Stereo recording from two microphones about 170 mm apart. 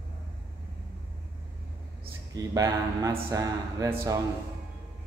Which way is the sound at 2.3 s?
20° right (ahead or behind).